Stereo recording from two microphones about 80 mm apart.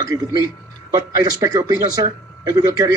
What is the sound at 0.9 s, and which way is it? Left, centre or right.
Speech, right.